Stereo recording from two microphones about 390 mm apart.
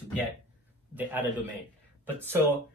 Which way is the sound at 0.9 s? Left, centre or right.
Centre.